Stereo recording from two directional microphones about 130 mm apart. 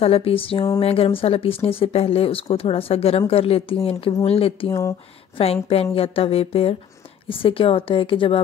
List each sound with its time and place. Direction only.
0.0 s speech: 50° left (ahead or behind)